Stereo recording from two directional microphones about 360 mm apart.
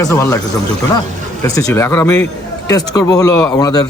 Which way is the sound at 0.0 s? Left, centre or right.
Centre.